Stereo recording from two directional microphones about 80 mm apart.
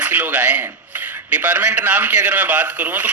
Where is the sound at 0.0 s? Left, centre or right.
Right.